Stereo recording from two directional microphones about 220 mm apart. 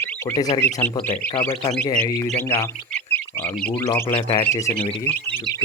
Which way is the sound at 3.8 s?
20° left (ahead or behind).